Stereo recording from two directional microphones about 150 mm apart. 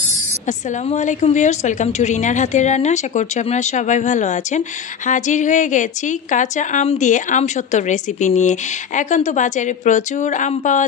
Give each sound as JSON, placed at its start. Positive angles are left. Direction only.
{"t": 0.5, "sound": "a woman's voice", "side_deg": 55}